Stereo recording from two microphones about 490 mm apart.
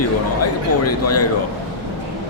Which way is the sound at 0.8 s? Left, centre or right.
Left.